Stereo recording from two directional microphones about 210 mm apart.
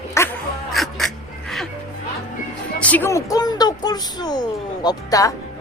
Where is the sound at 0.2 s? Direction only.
15° left (ahead or behind).